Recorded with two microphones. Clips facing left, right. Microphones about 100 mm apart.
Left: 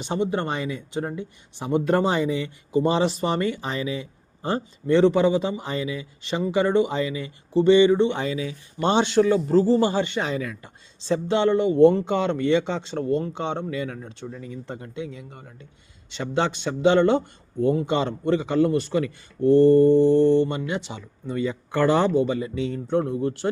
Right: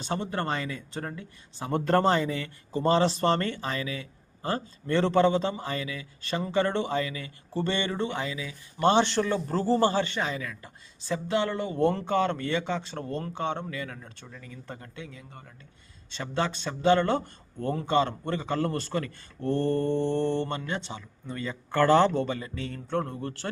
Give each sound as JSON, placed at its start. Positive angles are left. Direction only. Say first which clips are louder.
{"t": 0.0, "sound": "speech", "louder": "left 5 dB", "side_deg": 20}
{"t": 8.8, "sound": "speech", "louder": "left 3 dB", "side_deg": 20}